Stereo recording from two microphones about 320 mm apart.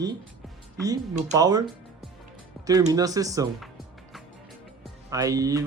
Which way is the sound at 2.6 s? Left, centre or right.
Centre.